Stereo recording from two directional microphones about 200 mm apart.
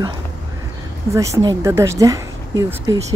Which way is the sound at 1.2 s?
15° right (ahead or behind).